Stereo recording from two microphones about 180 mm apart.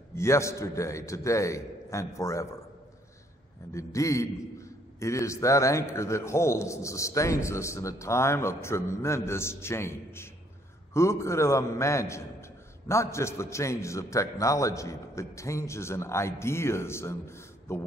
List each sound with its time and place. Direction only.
0.1 s a man's voice: 15° left (ahead or behind)
3.7 s a man's voice: 15° left (ahead or behind)